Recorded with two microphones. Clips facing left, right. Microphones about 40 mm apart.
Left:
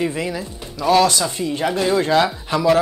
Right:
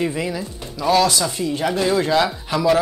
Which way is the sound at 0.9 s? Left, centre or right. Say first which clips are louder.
Left 2 dB; left.